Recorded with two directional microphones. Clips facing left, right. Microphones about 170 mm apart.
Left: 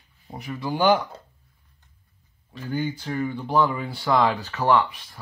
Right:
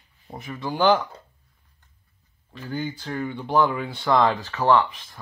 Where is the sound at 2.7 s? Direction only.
10° left (ahead or behind).